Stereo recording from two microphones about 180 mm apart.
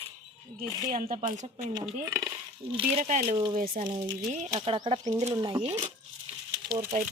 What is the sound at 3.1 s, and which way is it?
Speech, 40° right (ahead or behind).